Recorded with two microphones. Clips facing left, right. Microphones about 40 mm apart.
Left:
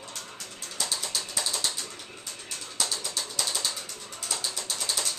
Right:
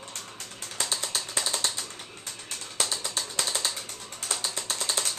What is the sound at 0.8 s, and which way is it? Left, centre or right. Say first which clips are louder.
Typing: right 1 dB; right.